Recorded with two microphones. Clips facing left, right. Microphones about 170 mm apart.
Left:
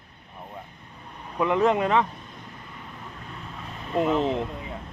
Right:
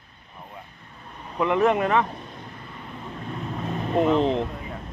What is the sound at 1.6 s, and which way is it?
Speech, 20° left (ahead or behind).